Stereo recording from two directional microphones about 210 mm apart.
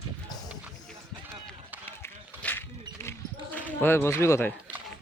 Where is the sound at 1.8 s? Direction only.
10° left (ahead or behind).